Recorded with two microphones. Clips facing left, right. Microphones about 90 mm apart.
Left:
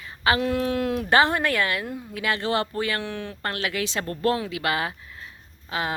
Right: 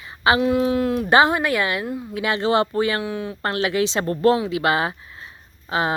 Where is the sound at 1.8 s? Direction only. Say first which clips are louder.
Right 5 dB; 5° right (ahead or behind).